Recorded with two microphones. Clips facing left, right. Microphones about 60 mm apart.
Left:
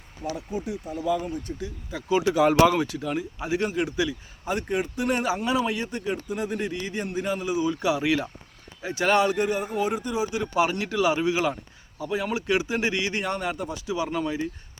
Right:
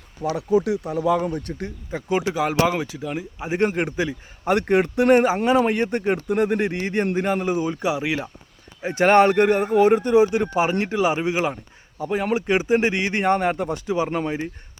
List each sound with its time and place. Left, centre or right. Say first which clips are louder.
0.2 s speech: right 11 dB; right
1.9 s speech: even; right
2.4 s speech: left 5 dB; centre
3.5 s speech: right 4 dB; right
4.4 s speech: right 8 dB; right
5.2 s speech: right 6 dB; right
8.8 s speech: right 7 dB; right
10.5 s speech: right 3 dB; right